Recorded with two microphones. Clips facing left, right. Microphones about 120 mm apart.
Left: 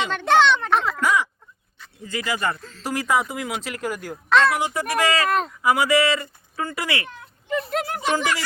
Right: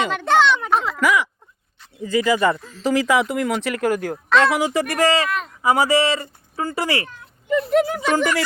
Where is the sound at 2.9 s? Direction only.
90° right.